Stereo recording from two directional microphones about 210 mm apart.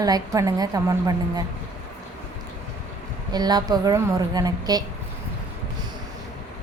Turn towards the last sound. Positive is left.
turn(degrees=-20)  # may be behind; listen again after turning